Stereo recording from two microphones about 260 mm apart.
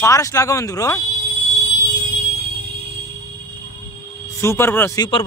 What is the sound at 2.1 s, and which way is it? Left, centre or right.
Music, right.